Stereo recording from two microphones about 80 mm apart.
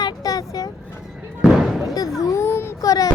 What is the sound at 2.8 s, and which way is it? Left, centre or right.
Child singing, left.